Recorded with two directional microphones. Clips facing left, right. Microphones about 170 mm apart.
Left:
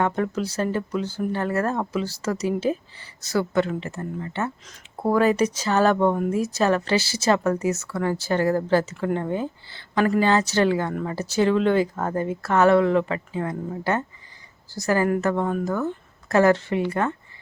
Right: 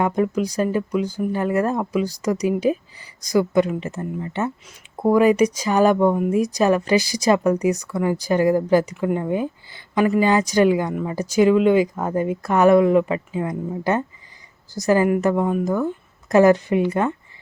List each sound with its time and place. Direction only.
0.0 s speech: 15° right (ahead or behind)